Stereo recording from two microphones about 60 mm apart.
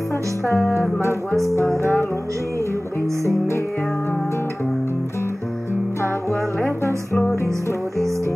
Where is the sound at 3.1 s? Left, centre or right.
Right.